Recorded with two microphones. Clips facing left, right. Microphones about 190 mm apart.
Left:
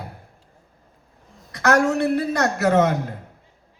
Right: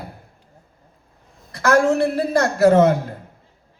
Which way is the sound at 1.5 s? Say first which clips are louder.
Right 2 dB; 30° right (ahead or behind).